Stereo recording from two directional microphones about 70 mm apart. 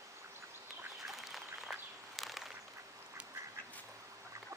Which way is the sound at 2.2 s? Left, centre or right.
Centre.